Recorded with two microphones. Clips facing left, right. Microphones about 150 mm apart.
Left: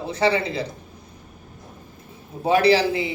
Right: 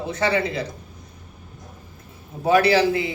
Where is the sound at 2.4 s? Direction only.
30° left (ahead or behind).